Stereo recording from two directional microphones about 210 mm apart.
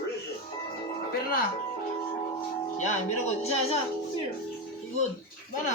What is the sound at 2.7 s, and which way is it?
Speech, 35° left (ahead or behind).